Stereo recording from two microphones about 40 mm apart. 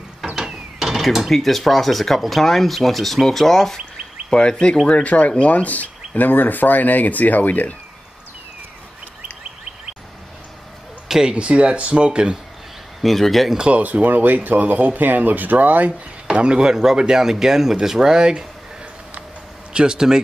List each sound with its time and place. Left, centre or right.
0.4 s mechanisms: centre
1.2 s speech: centre
4.3 s speech: left
5.0 s speech: left
11.1 s speech: centre
11.3 s speech: right
13.0 s speech: centre
13.6 s speech: right
16.3 s speech: right
19.7 s speech: right